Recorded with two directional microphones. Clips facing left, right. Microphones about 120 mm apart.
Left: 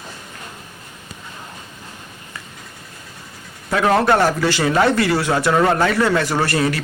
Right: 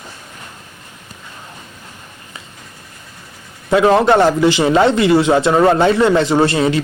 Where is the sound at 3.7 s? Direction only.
20° right (ahead or behind).